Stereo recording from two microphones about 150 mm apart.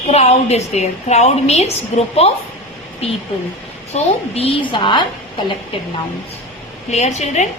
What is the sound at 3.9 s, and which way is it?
Speech, 40° left (ahead or behind).